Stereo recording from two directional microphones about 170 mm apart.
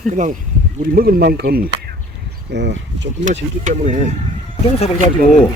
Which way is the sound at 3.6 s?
45° right (ahead or behind).